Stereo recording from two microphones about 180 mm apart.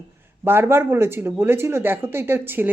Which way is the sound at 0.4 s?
15° right (ahead or behind).